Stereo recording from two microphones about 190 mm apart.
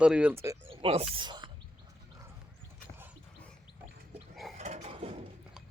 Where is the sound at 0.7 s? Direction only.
30° right (ahead or behind).